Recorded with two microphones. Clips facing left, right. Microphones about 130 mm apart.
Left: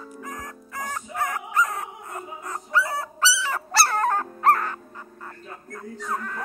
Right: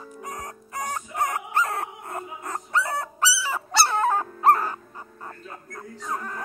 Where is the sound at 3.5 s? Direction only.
Centre (ahead or behind).